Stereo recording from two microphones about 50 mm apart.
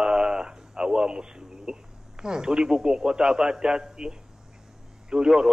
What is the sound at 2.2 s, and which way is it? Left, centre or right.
A man's voice, centre.